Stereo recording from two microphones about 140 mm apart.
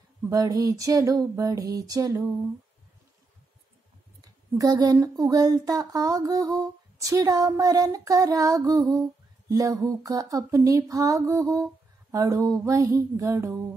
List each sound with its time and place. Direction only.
0.3 s speech: 25° right (ahead or behind)
4.2 s speech: 25° right (ahead or behind)